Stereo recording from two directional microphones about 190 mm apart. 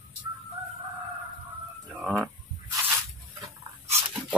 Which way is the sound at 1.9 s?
Centre (ahead or behind).